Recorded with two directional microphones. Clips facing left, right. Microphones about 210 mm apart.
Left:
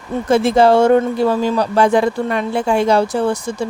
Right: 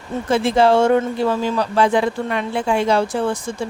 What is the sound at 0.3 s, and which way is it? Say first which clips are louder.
Speech: left 3 dB; 45° left (ahead or behind).